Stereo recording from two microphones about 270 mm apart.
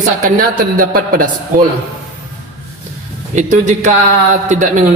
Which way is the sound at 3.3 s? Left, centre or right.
Right.